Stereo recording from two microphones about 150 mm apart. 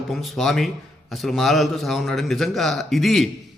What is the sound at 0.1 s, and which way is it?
A man's voice, centre (ahead or behind).